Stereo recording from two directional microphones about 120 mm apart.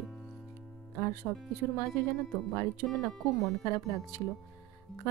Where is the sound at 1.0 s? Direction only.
20° left (ahead or behind).